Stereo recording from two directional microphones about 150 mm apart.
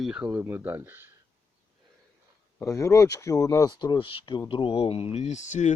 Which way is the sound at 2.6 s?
20° left (ahead or behind).